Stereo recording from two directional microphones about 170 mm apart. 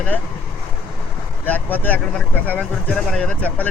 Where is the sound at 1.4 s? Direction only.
10° left (ahead or behind).